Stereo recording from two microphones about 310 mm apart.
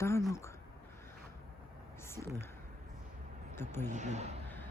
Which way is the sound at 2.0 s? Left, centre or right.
Centre.